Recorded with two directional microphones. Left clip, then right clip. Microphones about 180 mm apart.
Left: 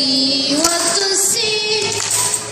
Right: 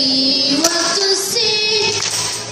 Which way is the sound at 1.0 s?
50° left (ahead or behind).